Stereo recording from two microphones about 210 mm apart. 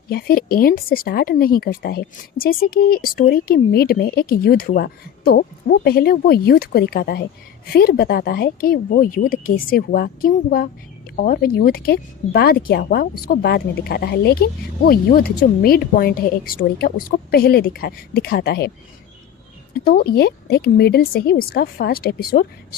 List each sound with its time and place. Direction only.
0.1 s speech: 45° left (ahead or behind)
19.8 s speech: 45° left (ahead or behind)